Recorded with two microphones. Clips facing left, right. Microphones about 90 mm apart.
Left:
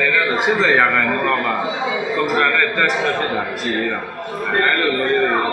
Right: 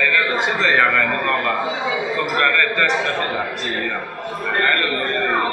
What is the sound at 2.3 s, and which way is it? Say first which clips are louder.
A man's voice: even; 5° left (ahead or behind).